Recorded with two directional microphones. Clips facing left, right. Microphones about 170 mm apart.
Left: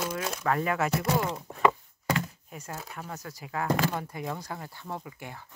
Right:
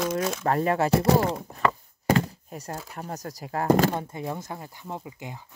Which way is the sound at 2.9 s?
40° right (ahead or behind).